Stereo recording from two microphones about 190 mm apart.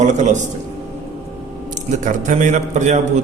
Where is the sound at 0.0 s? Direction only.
40° right (ahead or behind).